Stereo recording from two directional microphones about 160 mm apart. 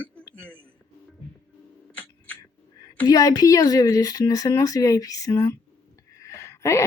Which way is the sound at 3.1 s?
25° left (ahead or behind).